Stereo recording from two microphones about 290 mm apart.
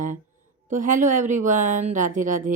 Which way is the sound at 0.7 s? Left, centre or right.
Right.